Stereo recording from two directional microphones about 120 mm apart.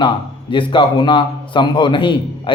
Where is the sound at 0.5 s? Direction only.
45° left (ahead or behind).